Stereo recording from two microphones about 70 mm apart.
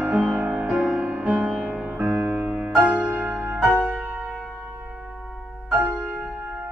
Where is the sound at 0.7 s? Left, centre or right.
Centre.